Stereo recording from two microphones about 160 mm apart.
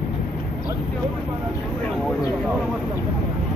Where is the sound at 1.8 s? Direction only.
5° left (ahead or behind).